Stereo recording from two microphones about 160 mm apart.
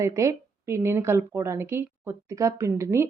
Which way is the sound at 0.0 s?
20° right (ahead or behind).